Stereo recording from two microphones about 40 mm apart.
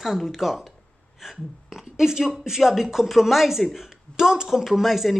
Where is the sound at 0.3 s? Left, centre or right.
Centre.